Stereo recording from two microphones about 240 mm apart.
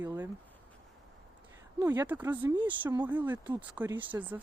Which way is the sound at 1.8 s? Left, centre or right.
Centre.